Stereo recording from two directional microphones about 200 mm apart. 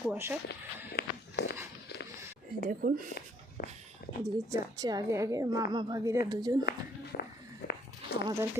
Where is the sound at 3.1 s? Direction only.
45° left (ahead or behind).